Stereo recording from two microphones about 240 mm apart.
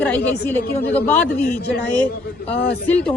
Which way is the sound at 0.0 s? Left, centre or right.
Centre.